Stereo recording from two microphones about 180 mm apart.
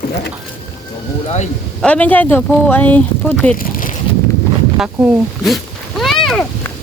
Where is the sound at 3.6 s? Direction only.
50° left (ahead or behind).